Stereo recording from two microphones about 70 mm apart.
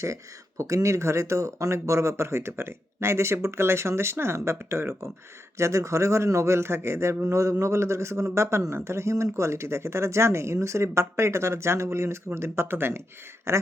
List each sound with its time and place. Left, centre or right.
0.0 s a man's voice: right